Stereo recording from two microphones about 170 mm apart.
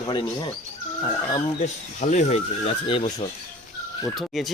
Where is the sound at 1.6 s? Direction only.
40° left (ahead or behind).